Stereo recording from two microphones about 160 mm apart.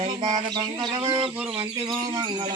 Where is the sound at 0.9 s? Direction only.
30° right (ahead or behind).